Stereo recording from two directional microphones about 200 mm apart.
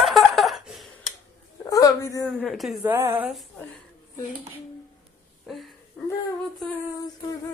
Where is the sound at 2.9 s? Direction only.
10° right (ahead or behind).